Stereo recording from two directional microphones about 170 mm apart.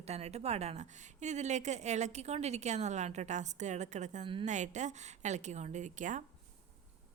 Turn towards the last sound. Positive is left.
turn(degrees=-45)  # may be behind; listen again after turning